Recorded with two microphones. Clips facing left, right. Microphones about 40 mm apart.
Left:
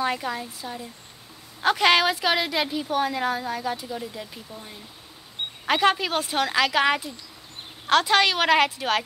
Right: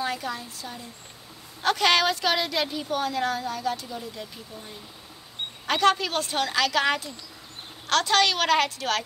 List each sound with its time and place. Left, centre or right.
0.0 s a woman's voice: centre